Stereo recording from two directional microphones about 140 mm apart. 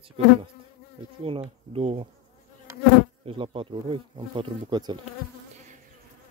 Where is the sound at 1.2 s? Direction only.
40° right (ahead or behind).